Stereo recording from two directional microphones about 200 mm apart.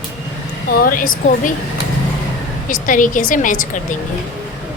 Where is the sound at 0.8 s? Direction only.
45° left (ahead or behind).